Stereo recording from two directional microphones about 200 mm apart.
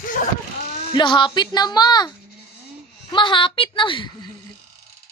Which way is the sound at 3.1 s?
25° left (ahead or behind).